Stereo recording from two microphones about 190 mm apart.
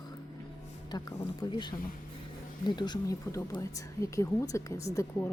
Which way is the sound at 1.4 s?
25° left (ahead or behind).